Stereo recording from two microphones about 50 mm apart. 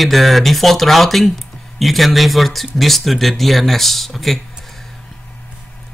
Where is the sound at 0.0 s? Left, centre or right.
Centre.